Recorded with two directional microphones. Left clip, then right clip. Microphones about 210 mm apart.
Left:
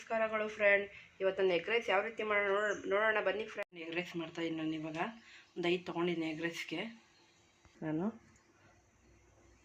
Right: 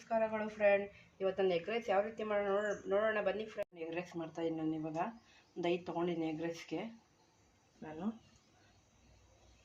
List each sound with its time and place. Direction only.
0.1 s speech: 15° left (ahead or behind)
3.8 s speech: 20° right (ahead or behind)